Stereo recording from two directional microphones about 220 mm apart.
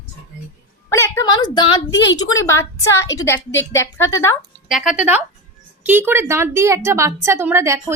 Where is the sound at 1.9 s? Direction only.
55° left (ahead or behind).